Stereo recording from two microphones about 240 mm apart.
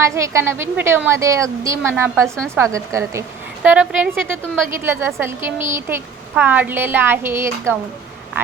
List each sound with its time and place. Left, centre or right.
0.0 s a woman's voice: centre
2.2 s a woman's voice: centre
2.6 s a woman's voice: centre